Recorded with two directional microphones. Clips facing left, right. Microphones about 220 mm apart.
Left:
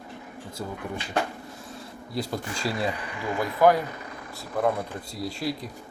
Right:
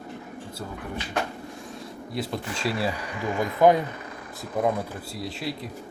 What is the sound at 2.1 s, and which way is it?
Speech, centre (ahead or behind).